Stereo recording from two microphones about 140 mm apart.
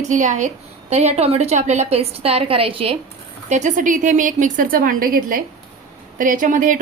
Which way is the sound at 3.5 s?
60° right (ahead or behind).